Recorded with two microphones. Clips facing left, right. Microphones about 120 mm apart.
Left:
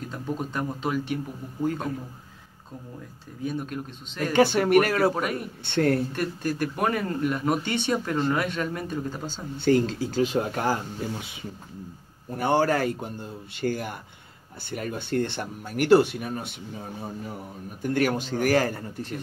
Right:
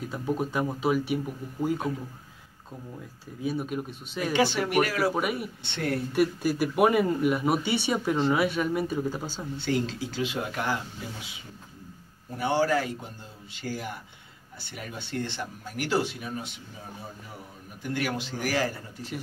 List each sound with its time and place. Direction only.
0.1 s speech: 10° right (ahead or behind)
3.4 s speech: 10° right (ahead or behind)
4.3 s speech: 50° left (ahead or behind)
5.1 s speech: 10° right (ahead or behind)
5.6 s speech: 50° left (ahead or behind)
6.1 s speech: 10° right (ahead or behind)
9.6 s speech: 45° left (ahead or behind)
12.4 s speech: 50° left (ahead or behind)
17.8 s speech: 45° left (ahead or behind)